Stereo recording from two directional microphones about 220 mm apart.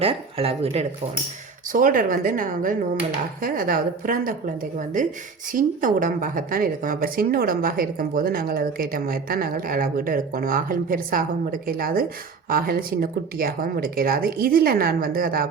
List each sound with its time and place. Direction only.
0.0 s speech: 25° right (ahead or behind)
1.7 s speech: 40° right (ahead or behind)